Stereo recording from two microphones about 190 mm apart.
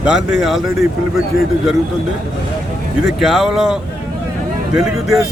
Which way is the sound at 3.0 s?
Centre (ahead or behind).